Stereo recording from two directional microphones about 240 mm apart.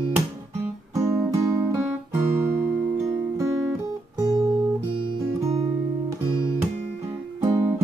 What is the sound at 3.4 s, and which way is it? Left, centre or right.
Guitar, centre.